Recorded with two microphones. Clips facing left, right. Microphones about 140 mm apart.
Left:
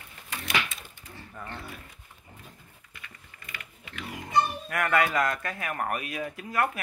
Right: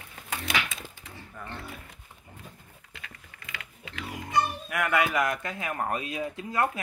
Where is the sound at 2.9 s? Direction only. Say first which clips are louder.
Right 3 dB; 90° right.